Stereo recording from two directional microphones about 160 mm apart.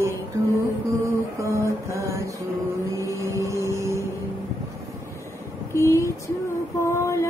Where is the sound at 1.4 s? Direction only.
20° right (ahead or behind).